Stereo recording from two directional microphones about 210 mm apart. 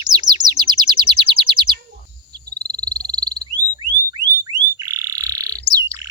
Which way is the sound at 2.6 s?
20° right (ahead or behind).